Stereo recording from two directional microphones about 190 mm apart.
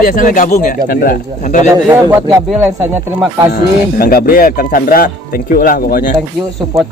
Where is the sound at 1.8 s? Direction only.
15° right (ahead or behind).